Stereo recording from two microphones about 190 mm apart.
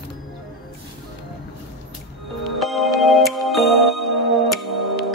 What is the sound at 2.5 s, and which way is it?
Music, centre (ahead or behind).